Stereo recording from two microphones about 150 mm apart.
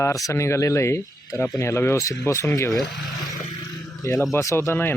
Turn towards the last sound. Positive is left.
turn(degrees=15)  # may be behind; listen again after turning